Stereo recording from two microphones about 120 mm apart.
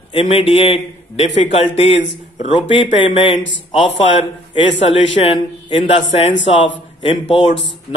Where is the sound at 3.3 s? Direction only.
45° left (ahead or behind).